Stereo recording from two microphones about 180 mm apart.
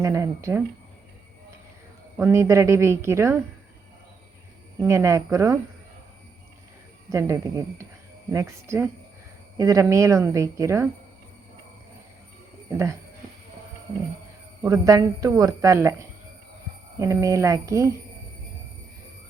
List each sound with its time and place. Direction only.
0.0 s a woman's voice: 15° right (ahead or behind)
2.1 s a woman's voice: 15° right (ahead or behind)
4.8 s a woman's voice: 15° right (ahead or behind)
7.1 s a woman's voice: 20° right (ahead or behind)
12.7 s a woman's voice: 15° right (ahead or behind)
14.6 s a woman's voice: 20° right (ahead or behind)